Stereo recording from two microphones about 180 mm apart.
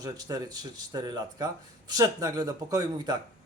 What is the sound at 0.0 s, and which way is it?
A man's voice, 20° right (ahead or behind).